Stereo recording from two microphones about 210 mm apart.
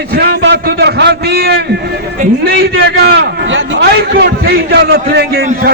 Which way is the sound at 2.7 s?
50° right (ahead or behind).